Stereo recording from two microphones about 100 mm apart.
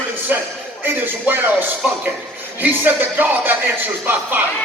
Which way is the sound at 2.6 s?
20° right (ahead or behind).